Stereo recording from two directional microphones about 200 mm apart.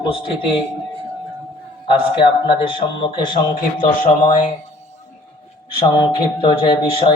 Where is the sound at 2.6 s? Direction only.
25° left (ahead or behind).